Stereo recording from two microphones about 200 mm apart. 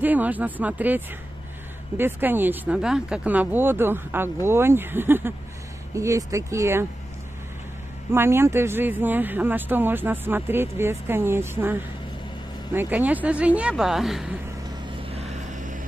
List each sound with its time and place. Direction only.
0.0 s speech: 10° right (ahead or behind)
8.1 s speech: 10° right (ahead or behind)
15.0 s vehicle: 30° right (ahead or behind)